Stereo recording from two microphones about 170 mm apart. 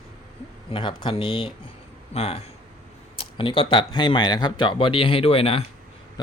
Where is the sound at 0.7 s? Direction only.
30° left (ahead or behind).